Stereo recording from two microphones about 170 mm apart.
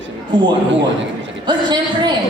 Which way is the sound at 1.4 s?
25° right (ahead or behind).